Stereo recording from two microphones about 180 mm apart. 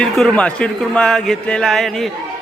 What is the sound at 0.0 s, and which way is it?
A man's voice, 5° left (ahead or behind).